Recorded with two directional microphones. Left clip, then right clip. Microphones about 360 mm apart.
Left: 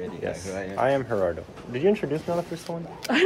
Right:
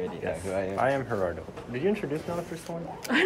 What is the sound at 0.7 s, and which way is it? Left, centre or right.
A woman's voice, centre.